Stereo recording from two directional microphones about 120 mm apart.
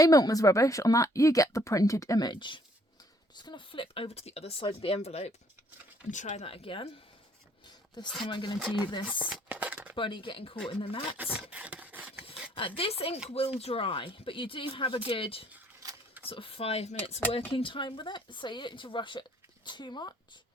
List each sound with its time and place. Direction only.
0.0 s a woman's voice: 30° left (ahead or behind); by 5.3 s 60° left (ahead or behind)
6.1 s speech: 90° left
6.4 s speech: 50° left (ahead or behind)
8.2 s speech: 40° left (ahead or behind)
9.0 s speech: 10° right (ahead or behind)
9.9 s speech: 45° left (ahead or behind)
11.2 s a sound: 10° right (ahead or behind)
12.5 s speech: 50° left (ahead or behind)
17.5 s speech: 45° left (ahead or behind)